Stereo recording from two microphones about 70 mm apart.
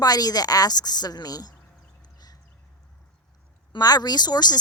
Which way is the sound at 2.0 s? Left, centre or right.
Left.